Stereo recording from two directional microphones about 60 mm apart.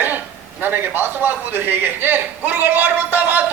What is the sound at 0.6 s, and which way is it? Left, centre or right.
A man's voice, right.